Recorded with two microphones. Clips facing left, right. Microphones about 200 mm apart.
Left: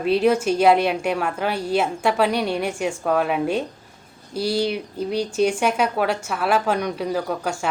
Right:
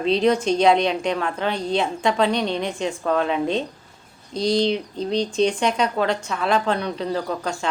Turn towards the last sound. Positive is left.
turn(degrees=10)  # may be behind; listen again after turning